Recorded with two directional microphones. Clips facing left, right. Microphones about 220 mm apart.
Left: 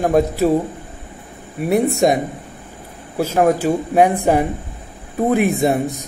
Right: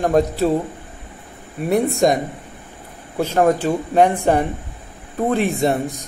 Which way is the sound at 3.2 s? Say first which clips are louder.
Left 1 dB; 5° left (ahead or behind).